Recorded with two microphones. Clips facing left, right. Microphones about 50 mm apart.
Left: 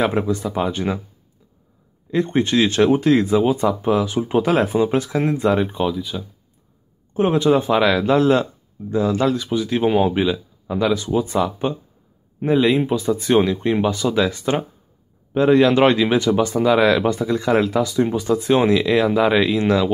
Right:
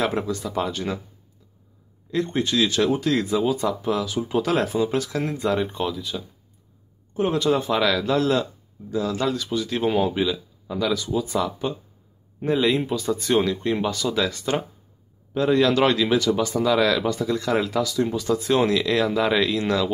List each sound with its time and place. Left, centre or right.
0.0 s speech: left
2.2 s speech: left
5.5 s speech: centre
7.3 s speech: left
8.8 s speech: left
9.2 s speech: centre; by 11.4 s left
12.4 s speech: centre